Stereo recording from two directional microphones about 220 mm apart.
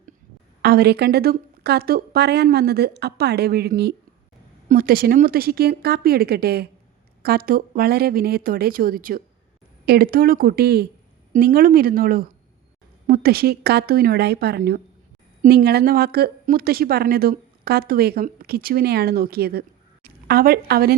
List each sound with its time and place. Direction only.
0.6 s a woman's voice: 45° right (ahead or behind)